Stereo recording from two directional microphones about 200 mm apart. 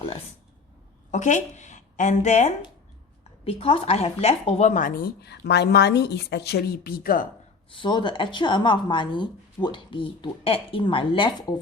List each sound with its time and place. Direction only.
1.1 s a woman's voice: 40° left (ahead or behind)
7.7 s speech: 25° left (ahead or behind)